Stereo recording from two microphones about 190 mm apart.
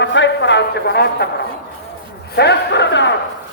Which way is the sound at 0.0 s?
70° left (ahead or behind).